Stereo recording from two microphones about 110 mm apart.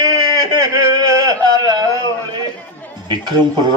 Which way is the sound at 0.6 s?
30° right (ahead or behind).